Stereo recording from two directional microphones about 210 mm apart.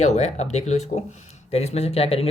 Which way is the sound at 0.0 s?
35° left (ahead or behind).